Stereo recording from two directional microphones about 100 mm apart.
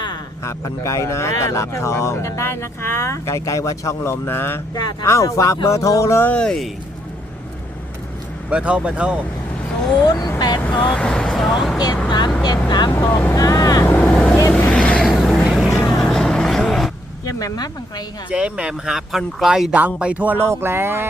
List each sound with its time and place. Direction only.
0.4 s speech: 30° left (ahead or behind)
4.7 s speech: 45° left (ahead or behind)
5.0 s speech: 30° left (ahead or behind)
6.3 s speech: 10° left (ahead or behind)
8.4 s speech: 10° right (ahead or behind)
10.0 s speech: 40° left (ahead or behind)
10.8 s speech: 5° left (ahead or behind)
12.0 s speech: 45° left (ahead or behind)
13.3 s vehicle: 35° left (ahead or behind)
13.8 s vehicle: 20° left (ahead or behind)
17.2 s speech: 40° left (ahead or behind)
18.3 s speech: 10° right (ahead or behind)